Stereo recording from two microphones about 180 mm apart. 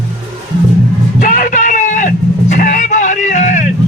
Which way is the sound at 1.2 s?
50° left (ahead or behind).